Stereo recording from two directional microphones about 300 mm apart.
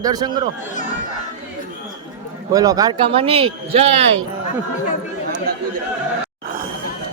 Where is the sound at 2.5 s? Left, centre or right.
Centre.